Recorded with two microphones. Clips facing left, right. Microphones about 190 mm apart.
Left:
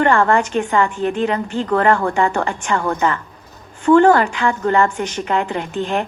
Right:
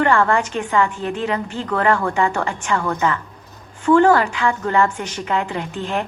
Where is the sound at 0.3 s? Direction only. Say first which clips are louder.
Left 3 dB; 55° left (ahead or behind).